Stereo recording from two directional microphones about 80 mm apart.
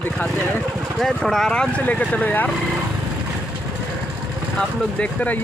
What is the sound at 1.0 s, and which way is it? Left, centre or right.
Speech, centre.